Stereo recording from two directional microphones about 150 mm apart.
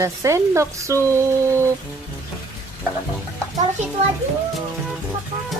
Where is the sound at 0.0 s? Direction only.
20° right (ahead or behind).